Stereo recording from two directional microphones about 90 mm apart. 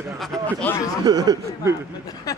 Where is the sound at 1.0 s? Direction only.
45° right (ahead or behind).